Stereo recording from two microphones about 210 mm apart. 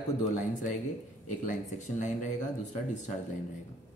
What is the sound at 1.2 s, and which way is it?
Speech, 35° left (ahead or behind).